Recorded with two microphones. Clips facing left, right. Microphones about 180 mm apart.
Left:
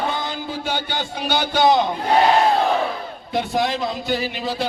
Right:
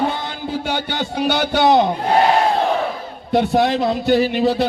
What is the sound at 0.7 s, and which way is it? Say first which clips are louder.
Music: right 3 dB; 55° right (ahead or behind).